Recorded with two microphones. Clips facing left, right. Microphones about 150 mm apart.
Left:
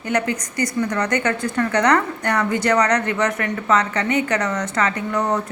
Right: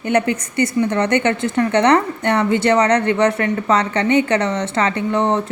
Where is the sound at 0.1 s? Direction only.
25° right (ahead or behind).